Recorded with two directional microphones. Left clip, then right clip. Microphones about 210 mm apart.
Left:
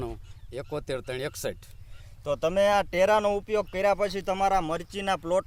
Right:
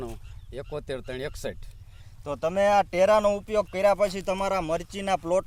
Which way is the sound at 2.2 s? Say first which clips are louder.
Even; 35° left (ahead or behind).